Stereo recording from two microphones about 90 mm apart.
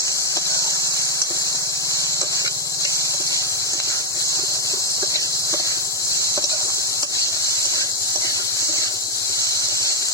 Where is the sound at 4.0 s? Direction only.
35° left (ahead or behind).